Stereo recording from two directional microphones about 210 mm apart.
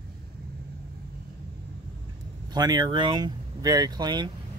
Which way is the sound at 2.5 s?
20° right (ahead or behind).